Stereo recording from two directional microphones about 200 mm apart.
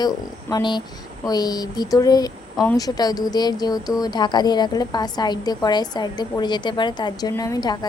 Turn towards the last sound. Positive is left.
turn(degrees=20)  # may be behind; listen again after turning